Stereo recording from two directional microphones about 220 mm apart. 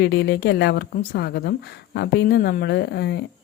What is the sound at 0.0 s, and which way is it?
Speech, 50° left (ahead or behind).